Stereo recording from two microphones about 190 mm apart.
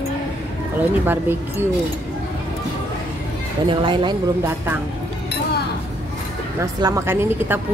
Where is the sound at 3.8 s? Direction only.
25° right (ahead or behind).